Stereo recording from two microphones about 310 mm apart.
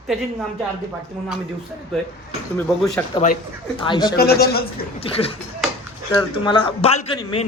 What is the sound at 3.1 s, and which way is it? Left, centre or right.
Speech, left.